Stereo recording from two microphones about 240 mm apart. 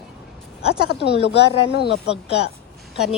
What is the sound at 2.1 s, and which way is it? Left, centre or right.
Speech, left.